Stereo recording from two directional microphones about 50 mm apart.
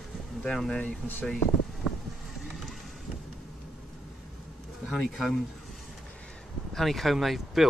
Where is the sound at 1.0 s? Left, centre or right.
Centre.